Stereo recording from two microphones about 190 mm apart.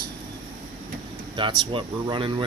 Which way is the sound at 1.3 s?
25° right (ahead or behind).